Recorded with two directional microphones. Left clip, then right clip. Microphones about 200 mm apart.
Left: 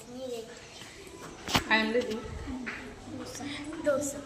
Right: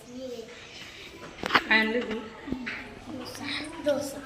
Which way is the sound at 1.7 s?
30° right (ahead or behind).